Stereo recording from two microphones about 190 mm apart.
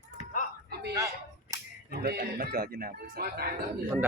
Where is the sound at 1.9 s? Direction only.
55° right (ahead or behind).